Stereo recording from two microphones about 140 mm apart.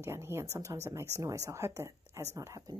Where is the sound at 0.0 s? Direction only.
20° right (ahead or behind).